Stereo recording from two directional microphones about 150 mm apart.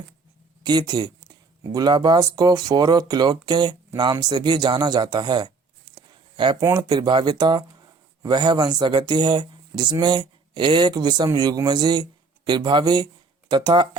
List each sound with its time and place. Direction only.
0.6 s speech: 30° right (ahead or behind)
6.1 s a sound: 30° right (ahead or behind)
6.7 s speech: 25° right (ahead or behind)